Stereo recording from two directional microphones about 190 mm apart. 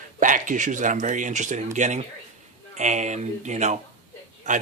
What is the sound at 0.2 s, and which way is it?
Speech, 45° right (ahead or behind).